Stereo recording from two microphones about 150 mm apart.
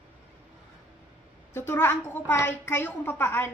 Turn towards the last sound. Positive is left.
turn(degrees=15)  # may be behind; listen again after turning